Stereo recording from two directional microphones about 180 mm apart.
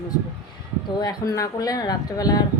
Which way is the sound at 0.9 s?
20° left (ahead or behind).